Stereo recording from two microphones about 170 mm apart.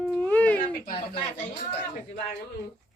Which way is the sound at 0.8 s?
65° left (ahead or behind).